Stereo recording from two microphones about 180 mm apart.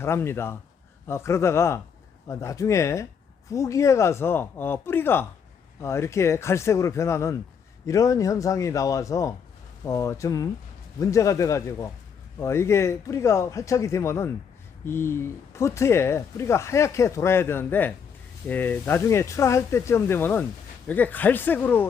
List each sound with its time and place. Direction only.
0.0 s speech: 15° left (ahead or behind)